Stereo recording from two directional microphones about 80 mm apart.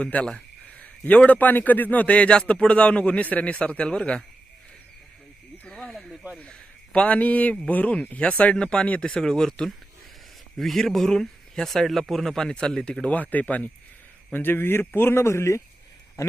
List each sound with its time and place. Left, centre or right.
0.0 s a man's voice: centre
5.6 s a sound: centre
6.4 s a man's voice: centre; by 15.6 s left